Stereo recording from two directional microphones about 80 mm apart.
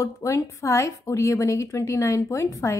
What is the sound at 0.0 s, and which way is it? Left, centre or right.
A woman's voice, left.